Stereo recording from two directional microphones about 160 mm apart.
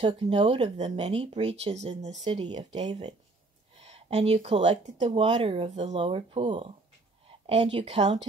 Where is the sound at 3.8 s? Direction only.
40° right (ahead or behind).